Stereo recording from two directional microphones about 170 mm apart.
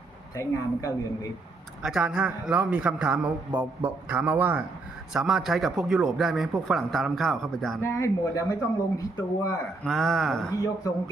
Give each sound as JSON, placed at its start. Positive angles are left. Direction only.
{"t": 0.3, "sound": "a woman's voice", "side_deg": 20}
{"t": 1.8, "sound": "a man's voice", "side_deg": -5}
{"t": 7.8, "sound": "a woman's voice", "side_deg": 15}
{"t": 9.8, "sound": "speech", "side_deg": 0}